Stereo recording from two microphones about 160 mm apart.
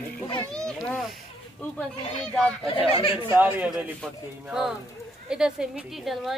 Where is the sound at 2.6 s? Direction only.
35° left (ahead or behind).